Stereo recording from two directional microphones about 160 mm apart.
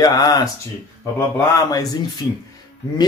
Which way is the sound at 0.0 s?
25° left (ahead or behind).